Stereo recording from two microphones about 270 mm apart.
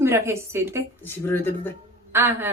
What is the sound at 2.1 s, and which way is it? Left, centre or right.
Speech, centre.